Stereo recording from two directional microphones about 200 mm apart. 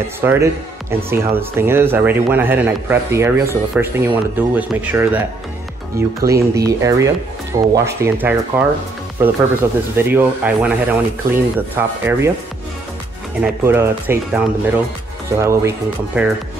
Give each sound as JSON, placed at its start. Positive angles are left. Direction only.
{"t": 0.2, "sound": "speech", "side_deg": -10}
{"t": 13.4, "sound": "speech", "side_deg": -10}